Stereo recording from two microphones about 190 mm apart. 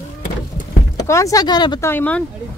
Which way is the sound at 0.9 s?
15° left (ahead or behind).